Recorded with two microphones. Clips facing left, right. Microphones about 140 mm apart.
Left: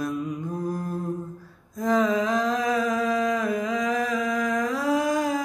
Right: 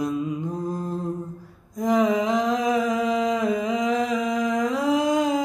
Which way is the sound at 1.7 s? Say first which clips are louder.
Right 2 dB; 20° right (ahead or behind).